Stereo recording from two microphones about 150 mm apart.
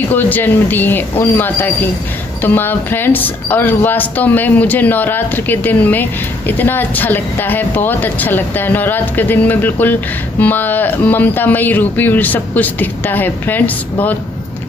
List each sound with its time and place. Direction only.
0.1 s speech: 10° left (ahead or behind)